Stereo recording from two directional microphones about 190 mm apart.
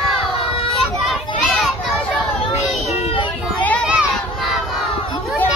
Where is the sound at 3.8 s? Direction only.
5° right (ahead or behind).